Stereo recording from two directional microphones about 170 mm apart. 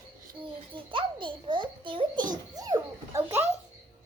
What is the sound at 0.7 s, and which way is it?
A child's voice, 30° right (ahead or behind).